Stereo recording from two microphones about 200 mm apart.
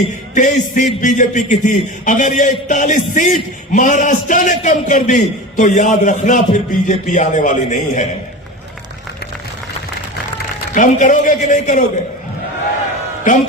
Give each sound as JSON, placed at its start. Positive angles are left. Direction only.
{"t": 0.3, "sound": "a man's voice", "side_deg": 40}
{"t": 10.8, "sound": "a man's voice", "side_deg": 40}